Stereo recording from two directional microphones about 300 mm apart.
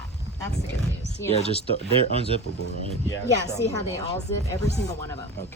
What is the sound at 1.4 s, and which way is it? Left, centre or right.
Speech, centre.